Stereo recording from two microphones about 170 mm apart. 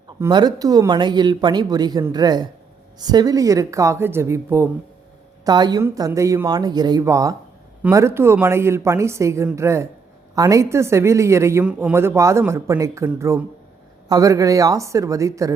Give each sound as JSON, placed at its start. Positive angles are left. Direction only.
{"t": 0.2, "sound": "speech", "side_deg": -25}
{"t": 5.5, "sound": "speech", "side_deg": -25}